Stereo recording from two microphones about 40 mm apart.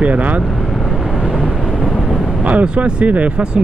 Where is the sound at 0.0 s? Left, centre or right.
Right.